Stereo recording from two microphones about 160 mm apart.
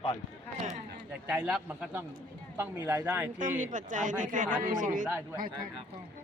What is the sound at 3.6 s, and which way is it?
A man's voice, 55° right (ahead or behind).